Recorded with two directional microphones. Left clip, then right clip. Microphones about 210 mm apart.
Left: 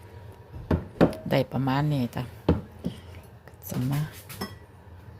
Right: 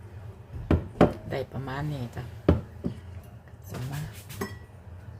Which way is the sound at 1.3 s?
45° left (ahead or behind).